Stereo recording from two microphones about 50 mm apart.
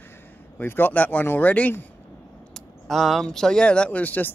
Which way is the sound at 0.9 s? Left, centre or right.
Left.